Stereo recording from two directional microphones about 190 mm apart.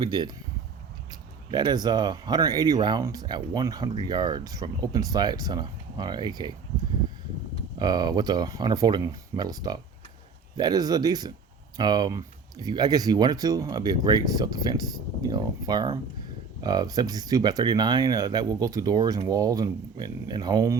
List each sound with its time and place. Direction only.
0.0 s speech: 25° right (ahead or behind)
1.5 s speech: 25° right (ahead or behind)
7.8 s speech: 20° right (ahead or behind)